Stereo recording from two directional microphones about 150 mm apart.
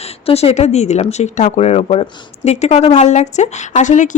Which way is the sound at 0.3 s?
45° left (ahead or behind).